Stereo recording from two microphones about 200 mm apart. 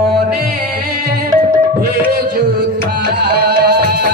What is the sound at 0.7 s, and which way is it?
Music, 50° right (ahead or behind).